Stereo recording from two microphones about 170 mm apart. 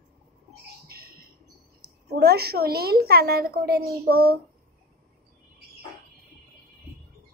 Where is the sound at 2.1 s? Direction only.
70° right (ahead or behind).